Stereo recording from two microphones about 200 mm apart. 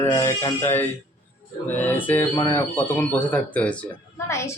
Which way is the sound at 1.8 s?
10° left (ahead or behind).